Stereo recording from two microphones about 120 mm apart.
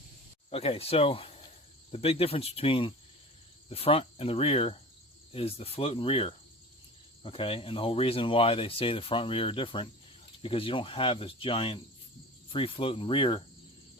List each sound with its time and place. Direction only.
0.5 s speech: 55° left (ahead or behind)